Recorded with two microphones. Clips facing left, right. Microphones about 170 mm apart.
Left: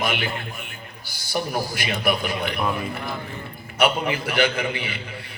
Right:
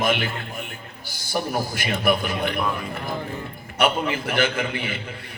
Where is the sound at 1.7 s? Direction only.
50° right (ahead or behind).